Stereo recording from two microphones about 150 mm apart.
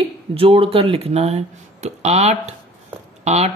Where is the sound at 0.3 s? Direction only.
40° right (ahead or behind).